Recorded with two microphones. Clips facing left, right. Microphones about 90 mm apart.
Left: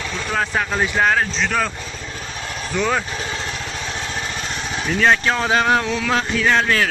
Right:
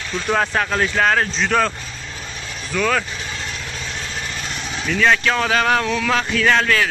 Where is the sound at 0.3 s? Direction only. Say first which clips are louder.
Right 3 dB; centre (ahead or behind).